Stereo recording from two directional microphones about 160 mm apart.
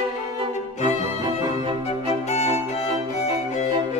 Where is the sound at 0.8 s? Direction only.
20° right (ahead or behind).